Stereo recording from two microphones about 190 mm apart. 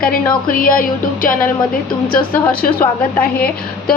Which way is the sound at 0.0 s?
50° left (ahead or behind).